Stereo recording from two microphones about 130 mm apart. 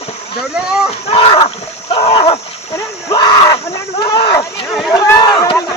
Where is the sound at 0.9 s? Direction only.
45° left (ahead or behind).